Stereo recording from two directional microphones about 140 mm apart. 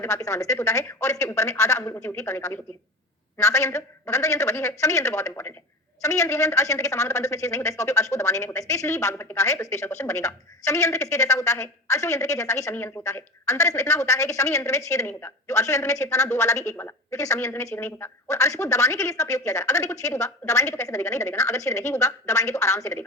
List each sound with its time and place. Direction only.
0.0 s speech: 20° left (ahead or behind)